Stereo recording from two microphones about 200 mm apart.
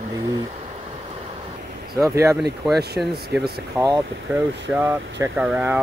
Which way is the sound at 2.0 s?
15° right (ahead or behind).